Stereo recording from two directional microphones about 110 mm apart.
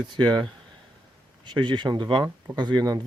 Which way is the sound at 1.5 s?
45° right (ahead or behind).